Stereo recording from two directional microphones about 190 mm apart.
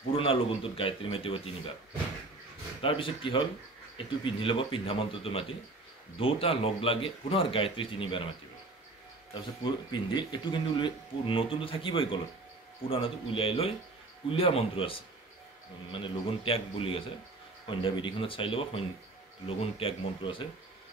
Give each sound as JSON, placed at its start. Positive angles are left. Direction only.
{"t": 0.1, "sound": "speech", "side_deg": 30}
{"t": 2.8, "sound": "speech", "side_deg": 25}
{"t": 9.3, "sound": "speech", "side_deg": 25}